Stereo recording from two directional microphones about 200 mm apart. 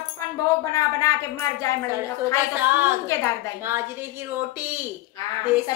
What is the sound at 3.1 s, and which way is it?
Speech, 15° left (ahead or behind).